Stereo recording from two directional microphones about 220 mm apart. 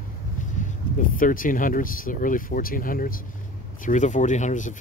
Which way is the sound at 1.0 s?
40° left (ahead or behind).